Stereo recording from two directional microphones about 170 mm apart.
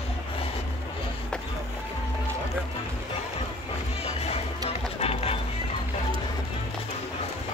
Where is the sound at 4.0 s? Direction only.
40° left (ahead or behind).